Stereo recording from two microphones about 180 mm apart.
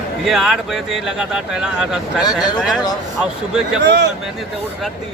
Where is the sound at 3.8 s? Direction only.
70° right (ahead or behind).